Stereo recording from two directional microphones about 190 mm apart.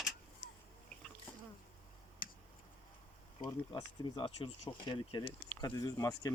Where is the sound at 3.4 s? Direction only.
20° left (ahead or behind).